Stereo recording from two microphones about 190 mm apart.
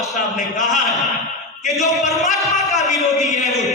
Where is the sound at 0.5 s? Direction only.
40° left (ahead or behind).